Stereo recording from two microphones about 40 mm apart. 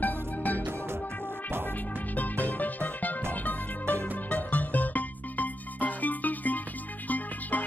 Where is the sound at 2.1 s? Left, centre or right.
Left.